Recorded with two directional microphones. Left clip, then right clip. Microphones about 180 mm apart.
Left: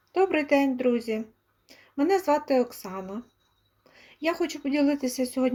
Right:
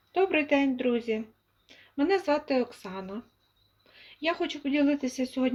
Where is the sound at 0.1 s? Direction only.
15° left (ahead or behind).